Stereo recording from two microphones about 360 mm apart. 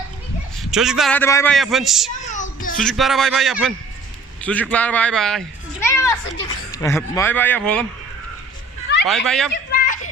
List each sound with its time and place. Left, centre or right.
0.6 s a man's voice: centre
2.3 s a sound: left
2.7 s a man's voice: centre
5.8 s children playing: centre
6.7 s a man's voice: centre
9.0 s a man's voice: centre
9.7 s a sound: left